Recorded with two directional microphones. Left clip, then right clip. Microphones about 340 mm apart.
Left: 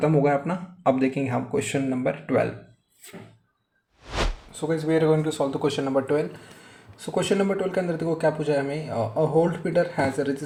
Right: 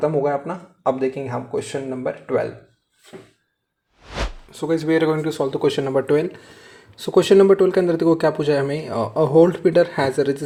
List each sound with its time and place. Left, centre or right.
0.0 s speech: centre
4.5 s speech: right